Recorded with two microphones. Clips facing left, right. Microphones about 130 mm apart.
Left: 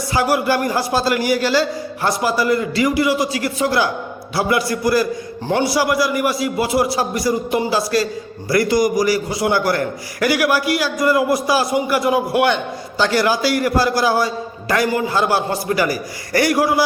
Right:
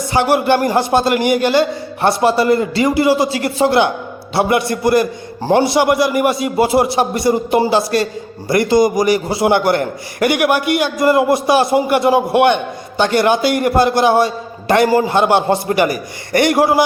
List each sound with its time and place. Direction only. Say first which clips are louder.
0.1 s a man's voice: right 4 dB; 25° right (ahead or behind)